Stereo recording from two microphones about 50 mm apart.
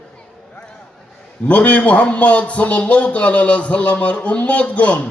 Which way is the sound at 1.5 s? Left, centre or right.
Left.